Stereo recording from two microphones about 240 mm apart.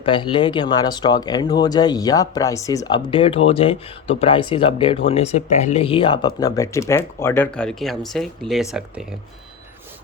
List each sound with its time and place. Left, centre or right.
0.0 s speech: left; by 8.6 s centre